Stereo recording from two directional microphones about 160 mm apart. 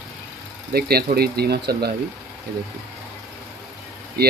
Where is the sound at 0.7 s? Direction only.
75° right (ahead or behind).